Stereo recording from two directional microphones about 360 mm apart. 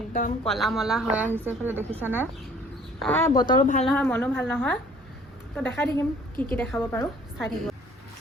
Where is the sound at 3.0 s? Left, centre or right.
Centre.